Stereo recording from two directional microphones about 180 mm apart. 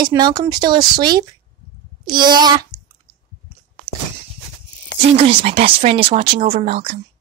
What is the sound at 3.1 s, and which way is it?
Chewing, 20° right (ahead or behind).